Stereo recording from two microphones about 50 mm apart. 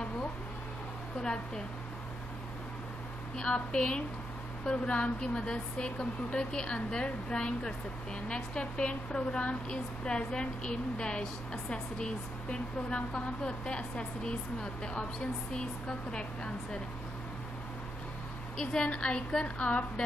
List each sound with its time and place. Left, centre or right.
1.2 s a woman's voice: centre
3.3 s a woman's voice: centre
18.6 s a woman's voice: centre